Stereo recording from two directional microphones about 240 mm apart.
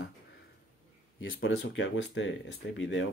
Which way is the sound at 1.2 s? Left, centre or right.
Left.